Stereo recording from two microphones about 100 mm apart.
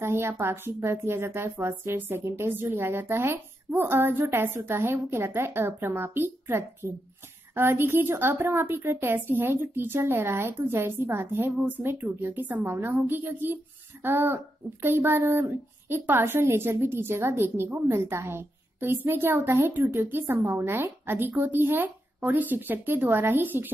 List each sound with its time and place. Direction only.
0.0 s speech: 25° right (ahead or behind)